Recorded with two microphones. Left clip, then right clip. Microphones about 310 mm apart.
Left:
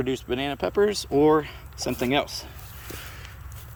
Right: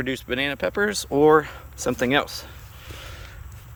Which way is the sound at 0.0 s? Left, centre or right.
Centre.